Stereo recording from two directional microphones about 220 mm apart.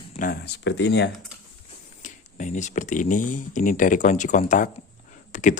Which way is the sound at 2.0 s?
35° left (ahead or behind).